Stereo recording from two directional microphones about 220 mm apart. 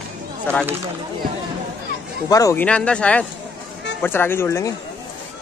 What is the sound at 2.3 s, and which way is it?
Speech, 15° left (ahead or behind).